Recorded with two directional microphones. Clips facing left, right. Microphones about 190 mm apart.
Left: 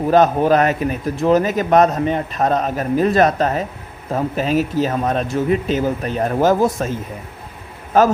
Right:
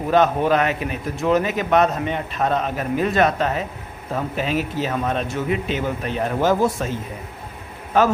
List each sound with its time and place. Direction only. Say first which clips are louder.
0.1 s a man's voice: left 3 dB; 40° left (ahead or behind)
7.9 s a man's voice: left 4 dB; 40° left (ahead or behind)